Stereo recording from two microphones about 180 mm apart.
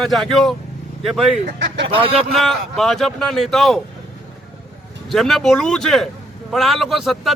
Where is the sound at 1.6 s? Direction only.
80° right.